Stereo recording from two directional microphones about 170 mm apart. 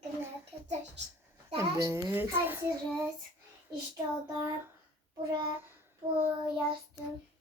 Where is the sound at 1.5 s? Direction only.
15° right (ahead or behind).